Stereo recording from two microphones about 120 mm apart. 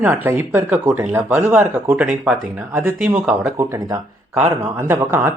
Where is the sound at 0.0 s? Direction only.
15° right (ahead or behind).